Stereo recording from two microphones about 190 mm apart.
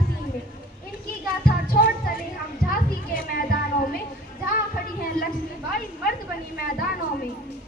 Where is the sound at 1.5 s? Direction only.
50° left (ahead or behind).